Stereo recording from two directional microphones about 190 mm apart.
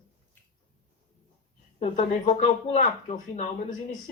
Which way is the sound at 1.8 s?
40° left (ahead or behind).